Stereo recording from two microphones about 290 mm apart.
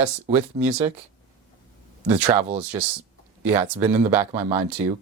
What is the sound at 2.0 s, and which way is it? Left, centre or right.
Speech, centre.